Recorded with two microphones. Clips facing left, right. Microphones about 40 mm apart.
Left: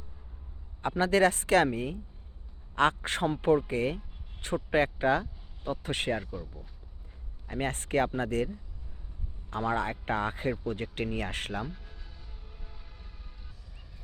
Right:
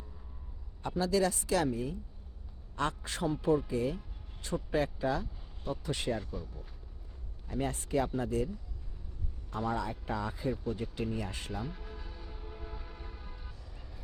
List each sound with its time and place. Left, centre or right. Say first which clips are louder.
0.8 s speech: left 5 dB; left
6.3 s speech: left 2 dB; centre
7.4 s speech: left 2 dB; left
9.5 s speech: left 4 dB; left
11.6 s train: left 1 dB; centre